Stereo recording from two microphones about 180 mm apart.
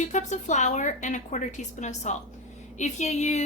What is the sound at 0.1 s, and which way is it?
A woman's voice, 40° left (ahead or behind).